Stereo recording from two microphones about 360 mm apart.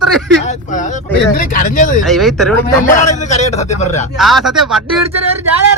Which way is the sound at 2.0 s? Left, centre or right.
Centre.